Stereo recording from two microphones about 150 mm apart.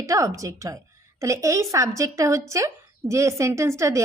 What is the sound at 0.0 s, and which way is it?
A woman's voice, 20° right (ahead or behind).